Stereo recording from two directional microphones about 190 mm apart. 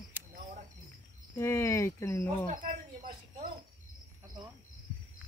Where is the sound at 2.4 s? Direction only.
45° right (ahead or behind).